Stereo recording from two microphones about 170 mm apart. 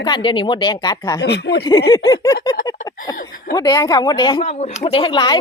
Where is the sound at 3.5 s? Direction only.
20° left (ahead or behind).